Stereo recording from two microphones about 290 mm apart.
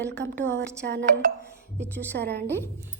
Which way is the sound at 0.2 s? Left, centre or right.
Right.